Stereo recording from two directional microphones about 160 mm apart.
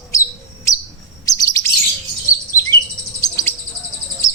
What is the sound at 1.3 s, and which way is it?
Chirp, 20° left (ahead or behind).